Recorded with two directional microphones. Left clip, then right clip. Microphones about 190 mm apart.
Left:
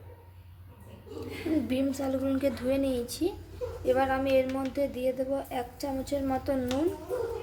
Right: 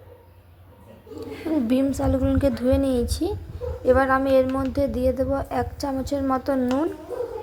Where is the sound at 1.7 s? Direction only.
25° right (ahead or behind).